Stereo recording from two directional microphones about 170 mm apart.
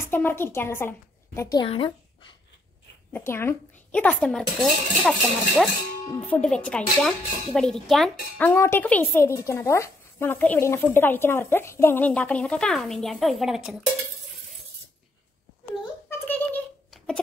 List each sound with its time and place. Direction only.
0.0 s a woman's voice: 15° left (ahead or behind)
1.7 s speech: 30° left (ahead or behind)
3.1 s speech: 10° left (ahead or behind)
6.1 s speech: 10° left (ahead or behind)
16.1 s a sound: 10° left (ahead or behind)